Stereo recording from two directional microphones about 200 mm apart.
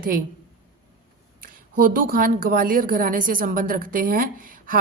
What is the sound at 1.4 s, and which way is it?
A woman's voice, 45° right (ahead or behind).